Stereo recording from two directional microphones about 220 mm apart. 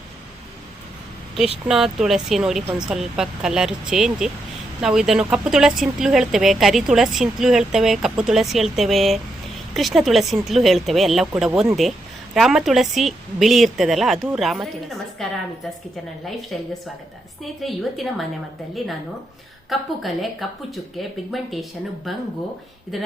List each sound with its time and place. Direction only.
1.6 s speech: centre (ahead or behind)
16.5 s speech: centre (ahead or behind)
19.7 s speech: centre (ahead or behind)